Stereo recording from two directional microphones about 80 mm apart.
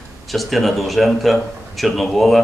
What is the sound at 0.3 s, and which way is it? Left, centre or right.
A man's voice, centre.